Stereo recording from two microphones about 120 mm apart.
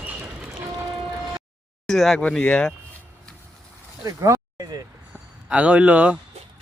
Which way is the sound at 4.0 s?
25° right (ahead or behind).